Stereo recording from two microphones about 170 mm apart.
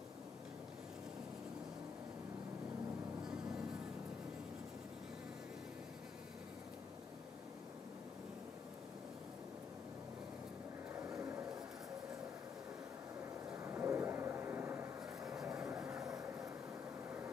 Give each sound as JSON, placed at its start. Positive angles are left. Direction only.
{"t": 11.1, "sound": "vehicle", "side_deg": -20}
{"t": 13.6, "sound": "vehicle", "side_deg": -15}